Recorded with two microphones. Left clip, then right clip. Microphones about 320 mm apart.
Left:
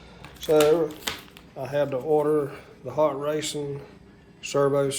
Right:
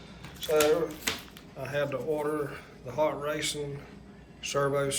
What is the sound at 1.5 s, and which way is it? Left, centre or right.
Speech, centre.